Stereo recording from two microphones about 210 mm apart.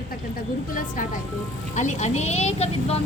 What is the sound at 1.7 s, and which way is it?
A woman's voice, 35° left (ahead or behind).